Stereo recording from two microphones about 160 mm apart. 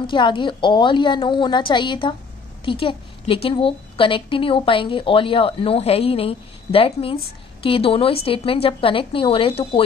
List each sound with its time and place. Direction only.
0.0 s a woman's voice: 30° left (ahead or behind)